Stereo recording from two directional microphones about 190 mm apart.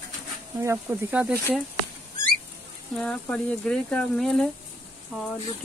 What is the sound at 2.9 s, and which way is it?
Speech, 5° left (ahead or behind).